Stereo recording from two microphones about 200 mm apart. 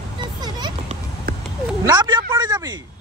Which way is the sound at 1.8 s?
20° right (ahead or behind).